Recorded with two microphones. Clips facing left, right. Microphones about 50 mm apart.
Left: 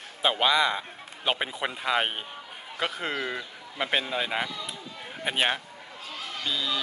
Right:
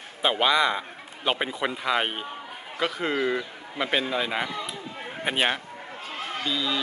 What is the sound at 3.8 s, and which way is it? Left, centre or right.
Speech, centre.